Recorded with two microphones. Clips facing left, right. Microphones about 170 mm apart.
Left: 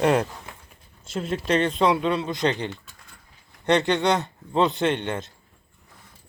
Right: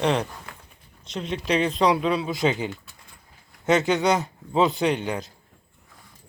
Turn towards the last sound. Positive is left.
turn(degrees=0)  # may be behind; listen again after turning